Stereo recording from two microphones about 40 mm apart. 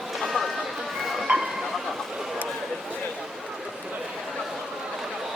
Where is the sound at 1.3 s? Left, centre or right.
Right.